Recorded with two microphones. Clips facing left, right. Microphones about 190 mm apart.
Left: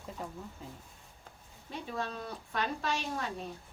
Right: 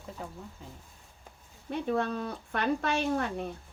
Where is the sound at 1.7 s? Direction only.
55° right (ahead or behind).